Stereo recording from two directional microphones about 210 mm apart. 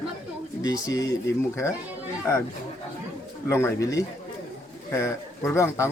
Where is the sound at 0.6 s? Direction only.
15° left (ahead or behind).